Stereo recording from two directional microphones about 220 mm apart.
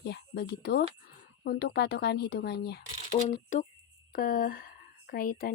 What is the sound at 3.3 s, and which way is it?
Speech, 35° left (ahead or behind).